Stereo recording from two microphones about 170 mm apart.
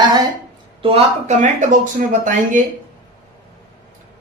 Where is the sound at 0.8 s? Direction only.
40° right (ahead or behind).